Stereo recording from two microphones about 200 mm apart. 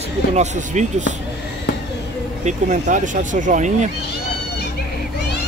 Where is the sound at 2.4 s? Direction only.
35° right (ahead or behind).